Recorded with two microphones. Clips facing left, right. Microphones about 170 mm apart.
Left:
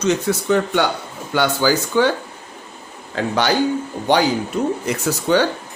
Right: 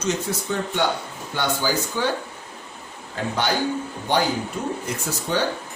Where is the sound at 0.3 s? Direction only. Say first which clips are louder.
Left 8 dB; 80° left.